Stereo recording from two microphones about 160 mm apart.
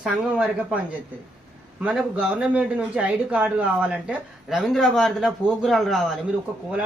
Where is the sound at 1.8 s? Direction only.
10° right (ahead or behind).